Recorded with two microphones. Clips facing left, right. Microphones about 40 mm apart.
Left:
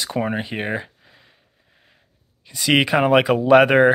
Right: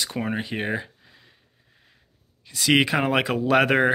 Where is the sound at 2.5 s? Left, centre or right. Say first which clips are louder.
Left 2 dB; centre.